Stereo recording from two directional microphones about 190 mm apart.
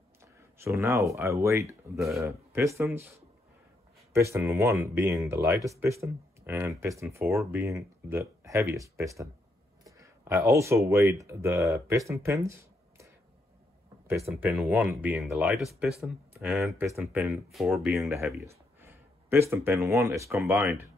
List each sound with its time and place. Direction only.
0.6 s speech: 15° right (ahead or behind)
14.3 s speech: 5° right (ahead or behind)
18.0 s speech: 15° right (ahead or behind)